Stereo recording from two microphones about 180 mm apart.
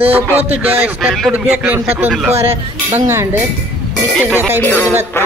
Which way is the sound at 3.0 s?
15° right (ahead or behind).